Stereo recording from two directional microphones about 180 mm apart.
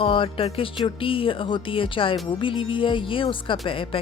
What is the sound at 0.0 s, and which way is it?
Speech, 30° left (ahead or behind).